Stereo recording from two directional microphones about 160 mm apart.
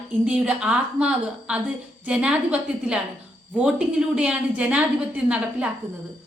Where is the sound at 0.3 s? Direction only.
5° right (ahead or behind).